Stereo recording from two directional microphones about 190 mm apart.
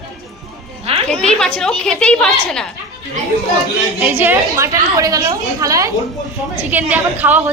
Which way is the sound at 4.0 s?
10° right (ahead or behind).